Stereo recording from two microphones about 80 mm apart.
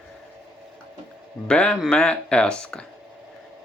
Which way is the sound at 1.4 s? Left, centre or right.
Centre.